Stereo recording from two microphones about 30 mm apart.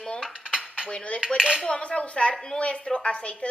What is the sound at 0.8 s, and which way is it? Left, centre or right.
A woman's voice, left.